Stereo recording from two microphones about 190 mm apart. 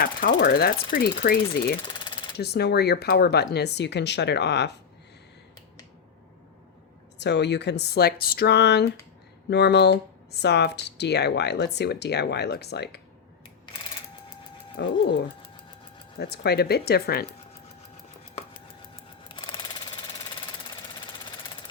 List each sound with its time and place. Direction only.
0.0 s ratchet: 50° left (ahead or behind)
1.8 s jackhammer: 25° left (ahead or behind)
2.4 s speech: 60° left (ahead or behind)
7.2 s speech: 65° left (ahead or behind)
14.8 s speech: 65° left (ahead or behind)
16.1 s speech: 55° left (ahead or behind)